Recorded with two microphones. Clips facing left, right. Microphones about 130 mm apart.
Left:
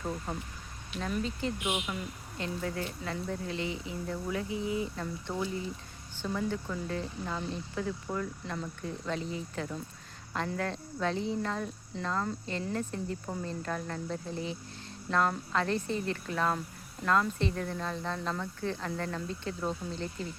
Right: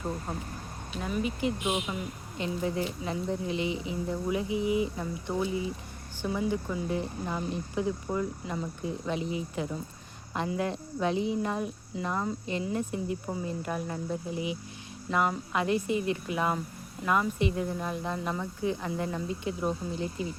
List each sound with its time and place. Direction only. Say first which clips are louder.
0.3 s speech: right 2 dB; 5° right (ahead or behind)